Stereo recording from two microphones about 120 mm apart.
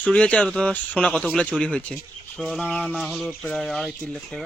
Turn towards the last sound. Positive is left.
turn(degrees=5)  # may be behind; listen again after turning